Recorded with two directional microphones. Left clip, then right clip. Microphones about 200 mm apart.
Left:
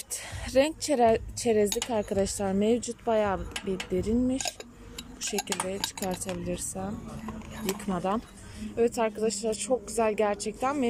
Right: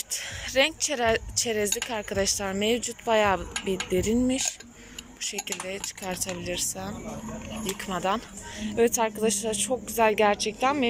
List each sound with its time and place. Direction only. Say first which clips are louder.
0.1 s speech: left 1 dB; 20° left (ahead or behind)
7.9 s speech: right 4 dB; 15° left (ahead or behind)